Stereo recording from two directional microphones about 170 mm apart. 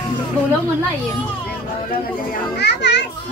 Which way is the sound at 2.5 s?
85° left.